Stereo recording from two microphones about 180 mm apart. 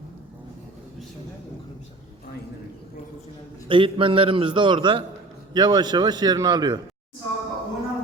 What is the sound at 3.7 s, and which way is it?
A man's voice, 30° right (ahead or behind).